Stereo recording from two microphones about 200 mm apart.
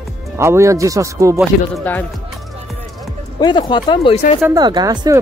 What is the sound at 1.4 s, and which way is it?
Speech, 5° left (ahead or behind).